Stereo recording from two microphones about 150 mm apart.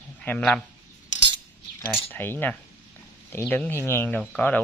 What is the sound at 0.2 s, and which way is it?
Speech, 5° left (ahead or behind).